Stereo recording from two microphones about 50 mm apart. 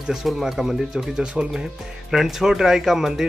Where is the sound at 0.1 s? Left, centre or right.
Centre.